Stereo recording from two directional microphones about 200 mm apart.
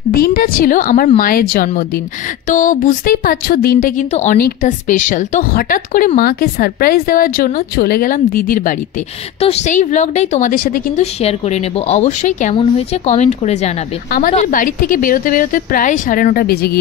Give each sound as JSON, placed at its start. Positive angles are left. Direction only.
{"t": 0.1, "sound": "a woman's voice", "side_deg": 45}
{"t": 4.1, "sound": "a woman's voice", "side_deg": 35}
{"t": 9.4, "sound": "a woman's voice", "side_deg": 30}
{"t": 11.1, "sound": "a woman's voice", "side_deg": 30}